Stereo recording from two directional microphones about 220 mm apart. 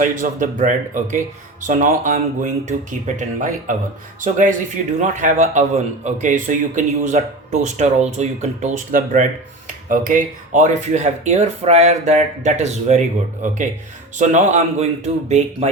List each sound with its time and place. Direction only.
0.0 s speech: 35° right (ahead or behind)